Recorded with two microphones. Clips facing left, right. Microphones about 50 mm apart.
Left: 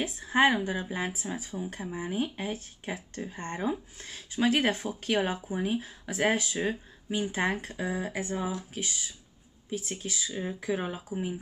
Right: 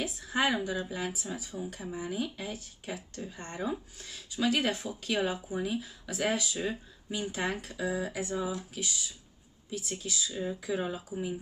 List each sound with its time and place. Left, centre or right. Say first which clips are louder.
0.0 s speech: left 6 dB; left